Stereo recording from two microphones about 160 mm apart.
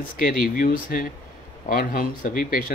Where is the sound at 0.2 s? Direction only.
60° left (ahead or behind).